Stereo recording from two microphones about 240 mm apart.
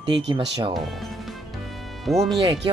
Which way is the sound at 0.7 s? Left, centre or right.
Centre.